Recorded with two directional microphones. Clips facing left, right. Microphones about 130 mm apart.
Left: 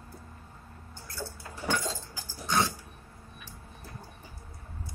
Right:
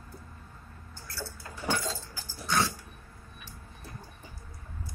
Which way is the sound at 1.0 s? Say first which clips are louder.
Left 1 dB; 20° left (ahead or behind).